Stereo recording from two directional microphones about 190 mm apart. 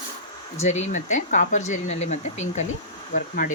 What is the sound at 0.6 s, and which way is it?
Speech, 35° left (ahead or behind).